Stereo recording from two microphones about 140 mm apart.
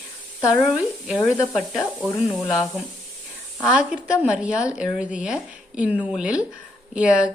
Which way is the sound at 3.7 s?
5° right (ahead or behind).